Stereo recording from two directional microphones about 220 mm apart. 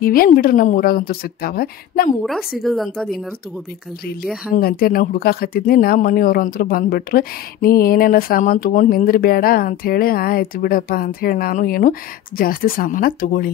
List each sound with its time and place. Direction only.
0.0 s speech: 40° left (ahead or behind)
2.6 s a woman's voice: centre (ahead or behind)
4.6 s speech: 45° left (ahead or behind)